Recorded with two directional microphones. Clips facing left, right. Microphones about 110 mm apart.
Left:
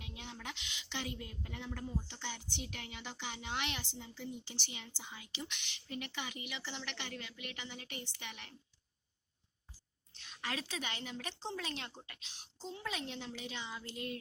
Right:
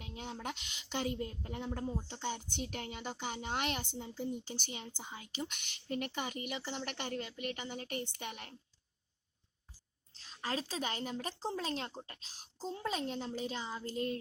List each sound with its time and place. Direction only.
0.0 s a woman's voice: 40° right (ahead or behind)
10.2 s a woman's voice: 35° right (ahead or behind)